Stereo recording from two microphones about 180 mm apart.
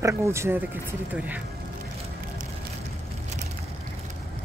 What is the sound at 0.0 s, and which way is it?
Speech, 15° right (ahead or behind).